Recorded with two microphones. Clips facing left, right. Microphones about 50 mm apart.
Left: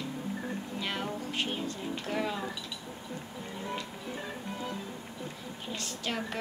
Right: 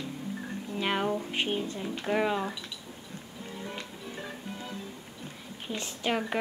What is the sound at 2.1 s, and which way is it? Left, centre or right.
Speech, right.